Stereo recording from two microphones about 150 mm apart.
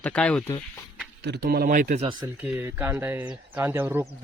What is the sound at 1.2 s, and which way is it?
Speech, 90° right.